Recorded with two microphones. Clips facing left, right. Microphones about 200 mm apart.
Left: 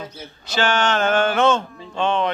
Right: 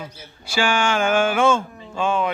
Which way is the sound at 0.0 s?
10° right (ahead or behind).